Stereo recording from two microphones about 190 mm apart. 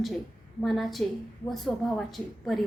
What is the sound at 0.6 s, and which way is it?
A woman's voice, centre (ahead or behind).